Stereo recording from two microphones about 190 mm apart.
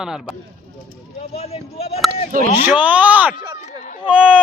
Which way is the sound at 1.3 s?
30° left (ahead or behind).